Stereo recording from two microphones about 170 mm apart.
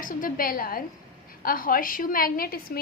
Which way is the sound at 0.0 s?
55° left (ahead or behind).